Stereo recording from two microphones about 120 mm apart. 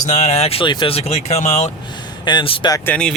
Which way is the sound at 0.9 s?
65° left (ahead or behind).